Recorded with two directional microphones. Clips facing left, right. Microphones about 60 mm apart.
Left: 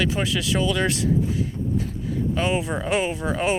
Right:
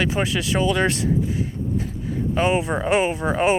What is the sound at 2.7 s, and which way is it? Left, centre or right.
Speech, right.